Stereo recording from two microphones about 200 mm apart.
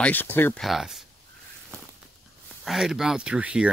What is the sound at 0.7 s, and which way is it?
Speech, centre (ahead or behind).